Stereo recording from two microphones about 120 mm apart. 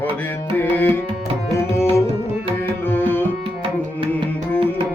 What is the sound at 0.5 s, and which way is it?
Music, 15° left (ahead or behind).